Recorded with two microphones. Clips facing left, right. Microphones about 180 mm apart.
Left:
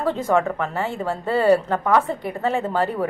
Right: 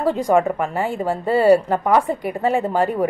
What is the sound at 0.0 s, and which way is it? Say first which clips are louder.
A woman's voice: right 3 dB; 10° right (ahead or behind).